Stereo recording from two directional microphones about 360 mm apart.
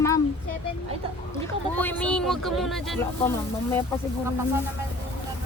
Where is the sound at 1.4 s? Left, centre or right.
Centre.